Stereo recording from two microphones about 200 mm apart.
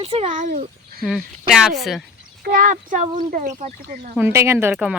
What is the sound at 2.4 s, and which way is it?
Speech, 45° right (ahead or behind).